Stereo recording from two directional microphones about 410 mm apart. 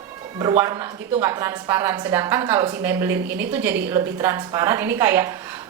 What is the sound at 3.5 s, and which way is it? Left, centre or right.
A woman's voice, centre.